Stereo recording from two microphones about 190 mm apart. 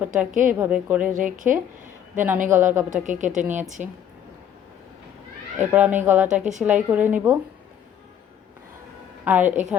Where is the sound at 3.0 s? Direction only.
40° right (ahead or behind).